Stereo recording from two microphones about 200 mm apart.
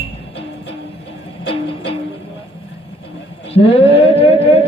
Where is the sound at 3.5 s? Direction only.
30° left (ahead or behind).